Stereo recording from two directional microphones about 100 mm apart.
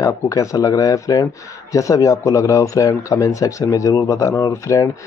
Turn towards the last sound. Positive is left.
turn(degrees=30)  # may be behind; listen again after turning